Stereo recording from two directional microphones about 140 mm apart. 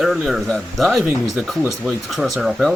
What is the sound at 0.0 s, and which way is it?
Speech, centre (ahead or behind).